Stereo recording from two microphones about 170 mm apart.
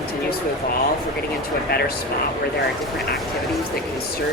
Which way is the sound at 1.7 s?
65° left (ahead or behind).